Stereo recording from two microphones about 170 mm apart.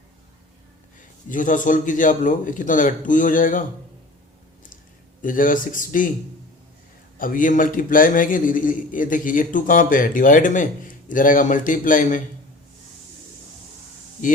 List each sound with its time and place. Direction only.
1.3 s a man's voice: 50° left (ahead or behind)
5.2 s a man's voice: 55° left (ahead or behind)
7.2 s a man's voice: 55° left (ahead or behind)